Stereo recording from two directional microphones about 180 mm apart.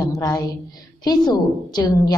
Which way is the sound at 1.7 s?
25° left (ahead or behind).